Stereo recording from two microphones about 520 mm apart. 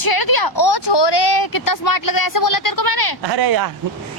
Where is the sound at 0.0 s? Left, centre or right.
Left.